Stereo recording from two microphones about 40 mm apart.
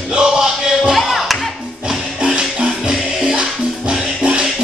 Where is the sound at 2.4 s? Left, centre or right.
Centre.